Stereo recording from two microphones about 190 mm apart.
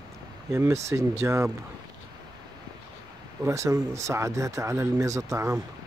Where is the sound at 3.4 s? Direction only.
15° right (ahead or behind).